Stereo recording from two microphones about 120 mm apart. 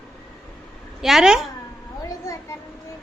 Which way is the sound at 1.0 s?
5° right (ahead or behind).